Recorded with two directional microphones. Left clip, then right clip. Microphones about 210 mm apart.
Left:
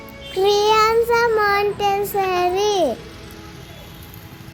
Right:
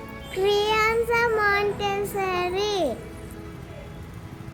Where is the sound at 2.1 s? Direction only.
10° left (ahead or behind).